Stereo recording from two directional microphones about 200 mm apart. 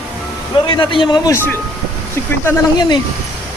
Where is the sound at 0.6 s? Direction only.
25° left (ahead or behind).